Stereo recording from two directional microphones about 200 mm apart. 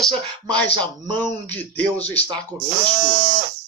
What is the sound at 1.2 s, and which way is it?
Speech, 10° left (ahead or behind).